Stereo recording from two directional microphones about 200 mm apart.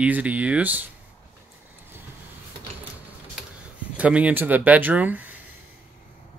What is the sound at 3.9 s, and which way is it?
Speech, 5° right (ahead or behind).